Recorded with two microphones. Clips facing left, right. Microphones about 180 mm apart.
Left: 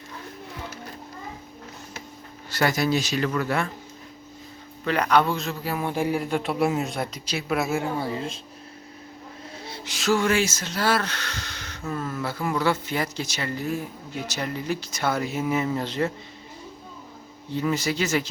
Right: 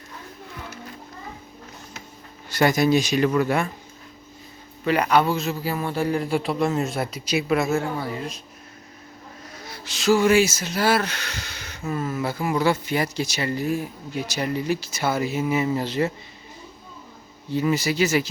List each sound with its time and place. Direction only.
2.5 s speech: 20° right (ahead or behind)
4.9 s speech: 10° right (ahead or behind)
5.7 s speech: 15° left (ahead or behind)
6.2 s speech: 5° right (ahead or behind)
6.8 s speech: 5° right (ahead or behind)
7.5 s speech: 10° left (ahead or behind)
7.9 s speech: 25° left (ahead or behind)
9.6 s a sound: 25° left (ahead or behind)
9.9 s speech: centre (ahead or behind)
17.5 s speech: 10° right (ahead or behind)